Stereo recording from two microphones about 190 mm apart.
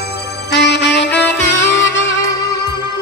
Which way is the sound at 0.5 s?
65° left (ahead or behind).